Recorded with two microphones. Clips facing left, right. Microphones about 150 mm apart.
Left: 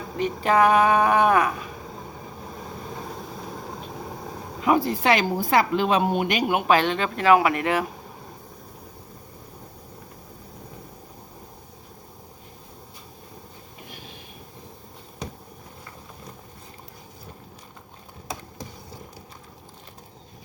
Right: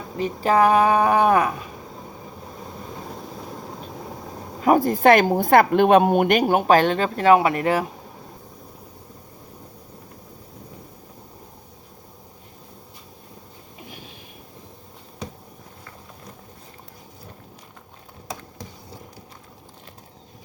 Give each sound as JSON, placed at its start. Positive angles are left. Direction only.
{"t": 0.2, "sound": "a woman's voice", "side_deg": -35}
{"t": 4.6, "sound": "speech", "side_deg": -45}
{"t": 6.5, "sound": "a woman's voice", "side_deg": -40}